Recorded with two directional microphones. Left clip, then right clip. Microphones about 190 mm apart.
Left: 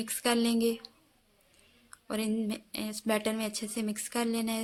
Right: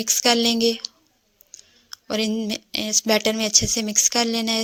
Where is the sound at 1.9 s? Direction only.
35° right (ahead or behind).